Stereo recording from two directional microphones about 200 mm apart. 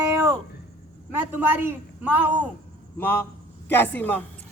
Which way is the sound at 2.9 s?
10° left (ahead or behind).